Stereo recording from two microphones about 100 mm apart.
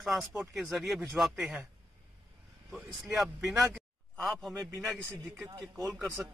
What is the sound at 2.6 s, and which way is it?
Speech, centre (ahead or behind).